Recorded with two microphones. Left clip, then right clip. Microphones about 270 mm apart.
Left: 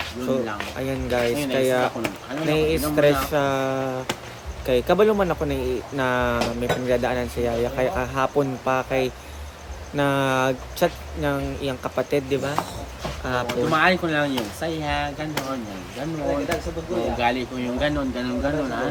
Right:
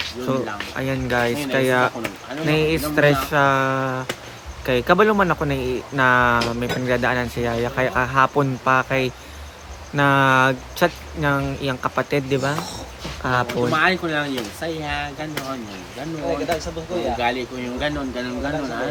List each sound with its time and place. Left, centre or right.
0.8 s speech: right
13.5 s speech: centre
17.2 s speech: centre